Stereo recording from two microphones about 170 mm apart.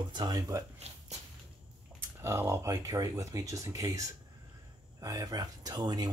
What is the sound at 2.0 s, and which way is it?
Speech, 15° right (ahead or behind).